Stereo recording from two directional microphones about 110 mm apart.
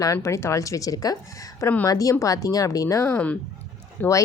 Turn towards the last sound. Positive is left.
turn(degrees=15)  # may be behind; listen again after turning